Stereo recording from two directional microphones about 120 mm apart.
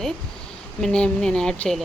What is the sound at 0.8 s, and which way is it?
A woman's voice, 10° left (ahead or behind).